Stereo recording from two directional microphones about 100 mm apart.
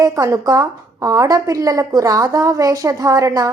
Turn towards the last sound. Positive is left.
turn(degrees=-35)  # may be behind; listen again after turning